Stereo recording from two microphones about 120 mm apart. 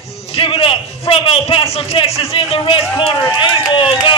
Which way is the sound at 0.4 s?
50° left (ahead or behind).